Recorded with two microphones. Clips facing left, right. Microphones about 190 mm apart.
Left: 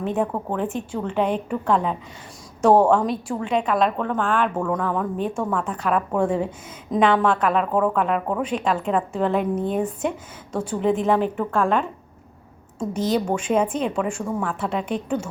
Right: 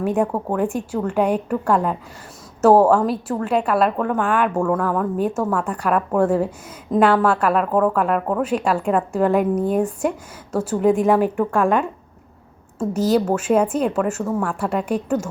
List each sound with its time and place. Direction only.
0.5 s a woman's voice: 10° right (ahead or behind)